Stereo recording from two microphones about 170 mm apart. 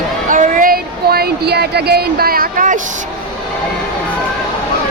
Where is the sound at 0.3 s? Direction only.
50° right (ahead or behind).